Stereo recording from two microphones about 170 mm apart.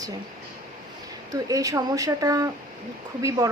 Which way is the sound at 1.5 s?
20° right (ahead or behind).